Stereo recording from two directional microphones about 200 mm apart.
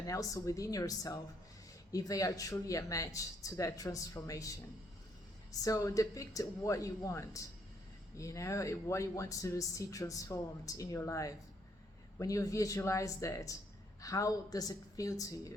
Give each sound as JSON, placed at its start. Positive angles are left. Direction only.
{"t": 0.1, "sound": "speech", "side_deg": 15}